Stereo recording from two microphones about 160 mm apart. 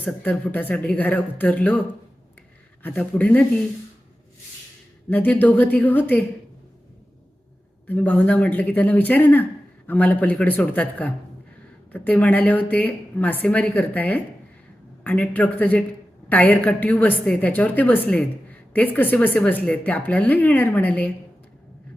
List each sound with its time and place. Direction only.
0.0 s speech: 10° left (ahead or behind)
2.8 s speech: 10° left (ahead or behind)
5.0 s speech: 10° left (ahead or behind)
7.9 s speech: 10° left (ahead or behind)